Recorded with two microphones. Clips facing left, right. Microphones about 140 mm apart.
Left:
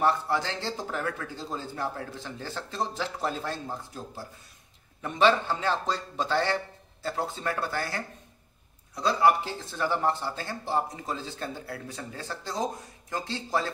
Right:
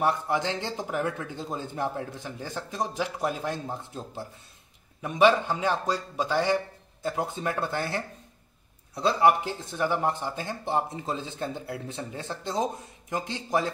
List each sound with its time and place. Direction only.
0.0 s speech: 15° right (ahead or behind)
5.0 s speech: 10° right (ahead or behind)